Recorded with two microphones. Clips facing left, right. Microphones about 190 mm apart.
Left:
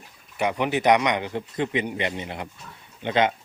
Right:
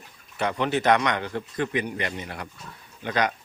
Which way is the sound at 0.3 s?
15° left (ahead or behind).